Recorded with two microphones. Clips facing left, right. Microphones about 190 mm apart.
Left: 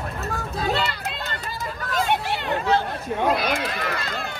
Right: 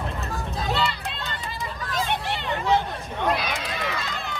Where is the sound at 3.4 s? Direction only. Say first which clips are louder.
Left 4 dB; 55° left (ahead or behind).